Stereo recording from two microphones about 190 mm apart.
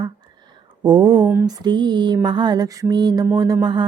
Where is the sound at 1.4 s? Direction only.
20° right (ahead or behind).